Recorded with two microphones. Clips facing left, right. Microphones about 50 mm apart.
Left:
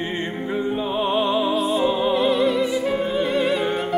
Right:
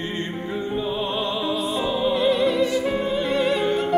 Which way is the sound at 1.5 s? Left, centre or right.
Centre.